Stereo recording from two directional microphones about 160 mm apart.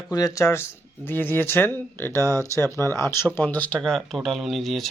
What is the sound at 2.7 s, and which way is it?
Speech, 15° left (ahead or behind).